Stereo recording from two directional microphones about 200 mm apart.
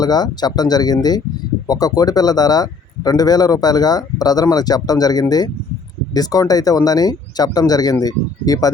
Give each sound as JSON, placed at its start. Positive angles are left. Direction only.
{"t": 0.0, "sound": "speech", "side_deg": 20}